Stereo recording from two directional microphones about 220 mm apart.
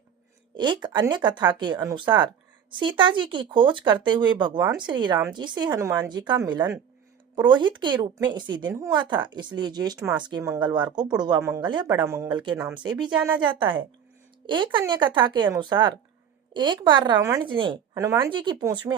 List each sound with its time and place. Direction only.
0.5 s speech: 20° right (ahead or behind)
10.0 s speech: 5° right (ahead or behind)
10.2 s speech: 15° right (ahead or behind)